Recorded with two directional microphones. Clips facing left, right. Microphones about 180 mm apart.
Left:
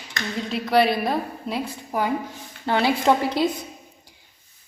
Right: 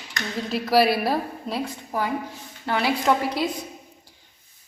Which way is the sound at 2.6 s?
25° left (ahead or behind).